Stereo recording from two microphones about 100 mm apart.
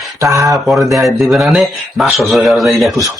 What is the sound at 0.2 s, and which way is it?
Speech, 35° right (ahead or behind).